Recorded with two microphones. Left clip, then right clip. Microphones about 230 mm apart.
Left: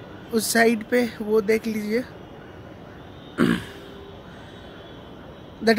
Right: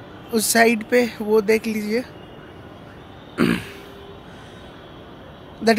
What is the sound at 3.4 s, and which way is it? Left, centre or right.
Throat clearing, centre.